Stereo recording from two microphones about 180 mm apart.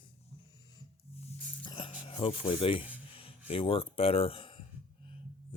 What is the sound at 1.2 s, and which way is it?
Music, 30° left (ahead or behind).